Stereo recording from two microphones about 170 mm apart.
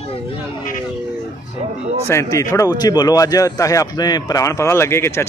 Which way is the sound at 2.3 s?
20° left (ahead or behind).